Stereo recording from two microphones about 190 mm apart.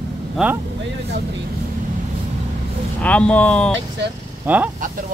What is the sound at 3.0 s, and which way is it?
Speech, 5° left (ahead or behind).